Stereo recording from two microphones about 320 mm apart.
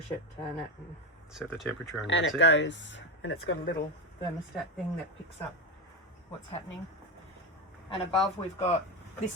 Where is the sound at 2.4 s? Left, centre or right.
Left.